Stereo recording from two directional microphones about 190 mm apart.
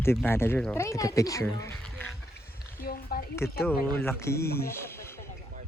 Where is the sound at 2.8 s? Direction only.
50° left (ahead or behind).